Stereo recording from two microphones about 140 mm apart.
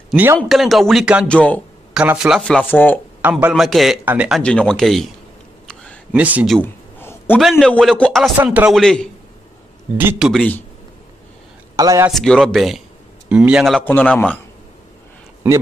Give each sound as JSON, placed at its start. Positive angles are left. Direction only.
{"t": 0.1, "sound": "a man's voice", "side_deg": -15}
{"t": 0.5, "sound": "speech", "side_deg": 0}
{"t": 1.2, "sound": "a man's voice", "side_deg": 10}
{"t": 2.0, "sound": "speech", "side_deg": -5}
{"t": 3.2, "sound": "speech", "side_deg": -10}
{"t": 3.6, "sound": "speech", "side_deg": 0}
{"t": 4.4, "sound": "speech", "side_deg": 5}
{"t": 6.1, "sound": "speech", "side_deg": -10}
{"t": 6.6, "sound": "a sound", "side_deg": 15}
{"t": 7.3, "sound": "speech", "side_deg": 0}
{"t": 9.9, "sound": "speech", "side_deg": -10}
{"t": 11.7, "sound": "a man's voice", "side_deg": -25}
{"t": 12.1, "sound": "speech", "side_deg": 0}
{"t": 13.7, "sound": "a man's voice", "side_deg": 10}